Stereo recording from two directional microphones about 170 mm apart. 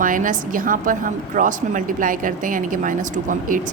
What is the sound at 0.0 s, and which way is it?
A woman's voice, 50° right (ahead or behind).